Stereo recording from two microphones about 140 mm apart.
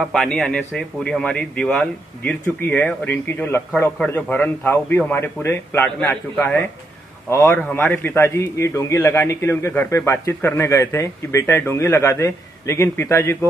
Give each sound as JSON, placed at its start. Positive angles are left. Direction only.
{"t": 0.0, "sound": "a man's voice", "side_deg": 0}